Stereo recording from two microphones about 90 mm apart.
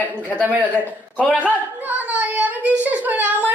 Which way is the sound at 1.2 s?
15° right (ahead or behind).